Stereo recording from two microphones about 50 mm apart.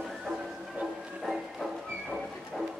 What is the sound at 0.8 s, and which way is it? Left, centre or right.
Music, right.